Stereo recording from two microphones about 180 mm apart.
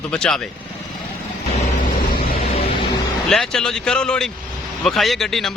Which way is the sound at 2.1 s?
55° left (ahead or behind).